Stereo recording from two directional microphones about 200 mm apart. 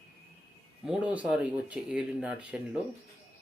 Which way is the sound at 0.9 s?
5° right (ahead or behind).